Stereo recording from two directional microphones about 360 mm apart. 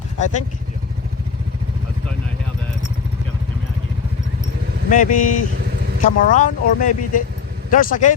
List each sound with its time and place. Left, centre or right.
4.9 s speech: left